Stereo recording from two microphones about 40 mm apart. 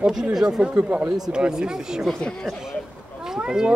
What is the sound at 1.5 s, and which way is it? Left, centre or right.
Speech, centre.